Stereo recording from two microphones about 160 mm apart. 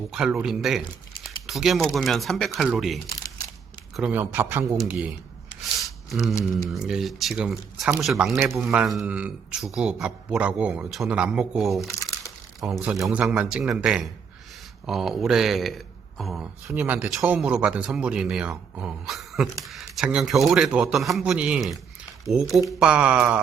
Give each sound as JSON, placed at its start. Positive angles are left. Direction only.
{"t": 0.1, "sound": "speech", "side_deg": -5}
{"t": 5.8, "sound": "a sound", "side_deg": 0}
{"t": 6.7, "sound": "speech", "side_deg": -5}
{"t": 8.4, "sound": "speech", "side_deg": -15}
{"t": 8.6, "sound": "speech", "side_deg": -5}
{"t": 11.8, "sound": "crumpling", "side_deg": 20}
{"t": 12.5, "sound": "speech", "side_deg": 0}